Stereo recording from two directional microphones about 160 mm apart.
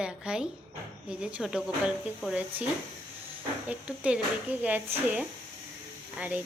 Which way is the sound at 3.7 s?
10° right (ahead or behind).